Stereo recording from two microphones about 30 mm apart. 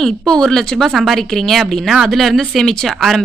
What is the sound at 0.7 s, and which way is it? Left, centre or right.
Speech, centre.